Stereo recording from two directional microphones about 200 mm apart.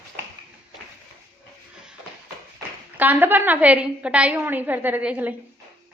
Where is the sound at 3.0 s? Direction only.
10° right (ahead or behind).